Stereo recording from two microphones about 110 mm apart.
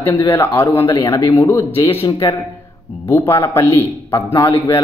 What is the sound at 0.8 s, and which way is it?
Speech, 50° left (ahead or behind).